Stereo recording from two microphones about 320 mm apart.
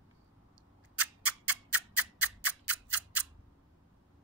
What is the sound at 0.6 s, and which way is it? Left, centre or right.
Scissors, centre.